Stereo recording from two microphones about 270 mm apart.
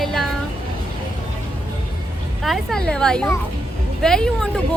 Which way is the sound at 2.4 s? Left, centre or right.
Centre.